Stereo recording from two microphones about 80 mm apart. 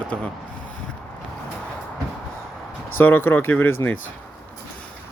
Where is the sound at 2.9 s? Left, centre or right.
Left.